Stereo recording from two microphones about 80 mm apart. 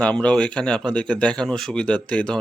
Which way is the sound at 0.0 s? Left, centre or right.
Centre.